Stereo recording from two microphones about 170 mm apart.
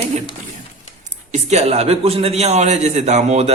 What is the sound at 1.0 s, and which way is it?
A man's voice, 45° right (ahead or behind).